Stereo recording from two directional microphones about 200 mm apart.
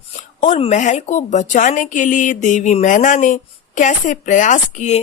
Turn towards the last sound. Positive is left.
turn(degrees=35)  # may be behind; listen again after turning